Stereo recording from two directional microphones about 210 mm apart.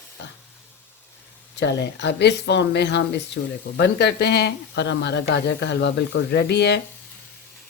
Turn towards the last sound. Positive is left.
turn(degrees=50)  # may be behind; listen again after turning